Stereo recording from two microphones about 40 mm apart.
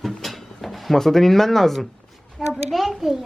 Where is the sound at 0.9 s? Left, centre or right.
Centre.